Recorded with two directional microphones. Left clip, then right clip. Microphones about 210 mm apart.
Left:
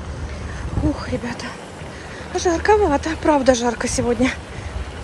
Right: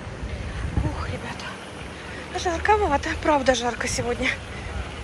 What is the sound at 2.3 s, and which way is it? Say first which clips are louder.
A woman's voice: left 5 dB; 30° left (ahead or behind).